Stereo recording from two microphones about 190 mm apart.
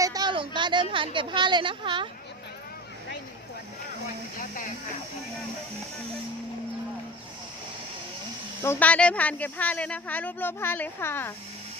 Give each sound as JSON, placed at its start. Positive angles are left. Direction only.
{"t": 0.0, "sound": "a woman's voice", "side_deg": -20}
{"t": 4.4, "sound": "speech", "side_deg": 45}
{"t": 8.6, "sound": "speech", "side_deg": 10}